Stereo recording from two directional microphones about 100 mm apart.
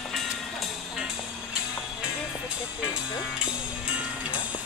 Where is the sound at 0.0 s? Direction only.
5° left (ahead or behind).